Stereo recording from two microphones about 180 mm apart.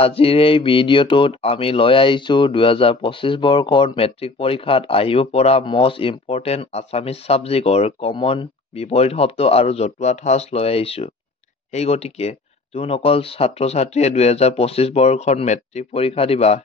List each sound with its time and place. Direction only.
0.0 s speech: 30° left (ahead or behind)